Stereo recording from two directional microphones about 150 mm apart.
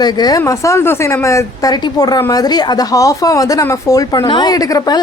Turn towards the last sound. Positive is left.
turn(degrees=25)  # may be behind; listen again after turning